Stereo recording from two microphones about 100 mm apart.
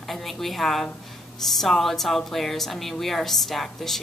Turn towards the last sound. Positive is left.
turn(degrees=0)  # may be behind; listen again after turning